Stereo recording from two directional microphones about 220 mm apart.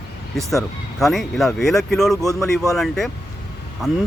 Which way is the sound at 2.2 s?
15° left (ahead or behind).